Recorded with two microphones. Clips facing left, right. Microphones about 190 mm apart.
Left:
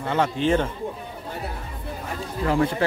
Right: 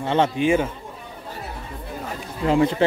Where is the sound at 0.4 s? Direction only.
10° right (ahead or behind).